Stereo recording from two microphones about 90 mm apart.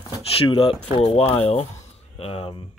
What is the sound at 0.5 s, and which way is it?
Speech, 90° left.